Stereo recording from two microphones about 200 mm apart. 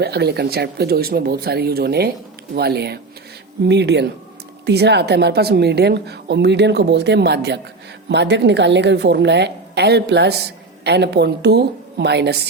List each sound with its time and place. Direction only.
0.0 s a woman's voice: 55° right (ahead or behind)